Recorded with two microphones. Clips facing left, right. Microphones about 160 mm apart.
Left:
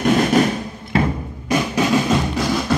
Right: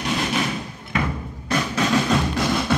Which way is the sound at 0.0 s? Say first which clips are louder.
Left 9 dB; 50° left (ahead or behind).